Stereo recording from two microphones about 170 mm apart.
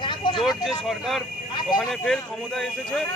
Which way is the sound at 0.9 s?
Centre (ahead or behind).